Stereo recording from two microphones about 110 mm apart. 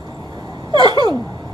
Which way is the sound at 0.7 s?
40° right (ahead or behind).